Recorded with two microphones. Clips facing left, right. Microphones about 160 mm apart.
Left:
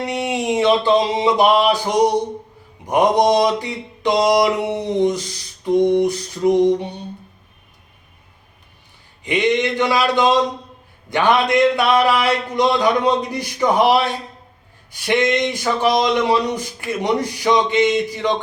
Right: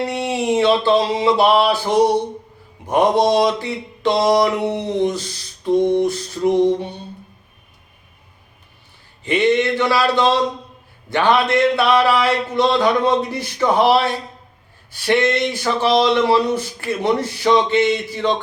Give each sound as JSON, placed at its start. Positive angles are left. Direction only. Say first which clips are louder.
{"t": 0.0, "sound": "speech", "louder": "right 1 dB", "side_deg": 20}
{"t": 9.2, "sound": "speech", "louder": "right 2 dB", "side_deg": 15}
{"t": 15.0, "sound": "speech", "louder": "right 1 dB", "side_deg": 15}